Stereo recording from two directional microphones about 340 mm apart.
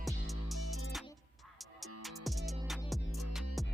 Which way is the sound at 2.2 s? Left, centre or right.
Centre.